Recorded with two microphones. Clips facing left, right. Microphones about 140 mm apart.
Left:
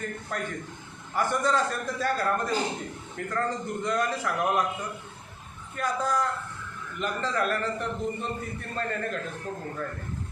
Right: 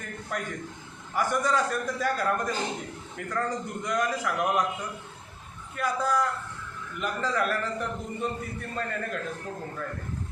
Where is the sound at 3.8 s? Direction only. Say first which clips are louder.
Even; 10° right (ahead or behind).